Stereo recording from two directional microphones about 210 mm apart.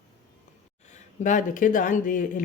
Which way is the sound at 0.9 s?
35° left (ahead or behind).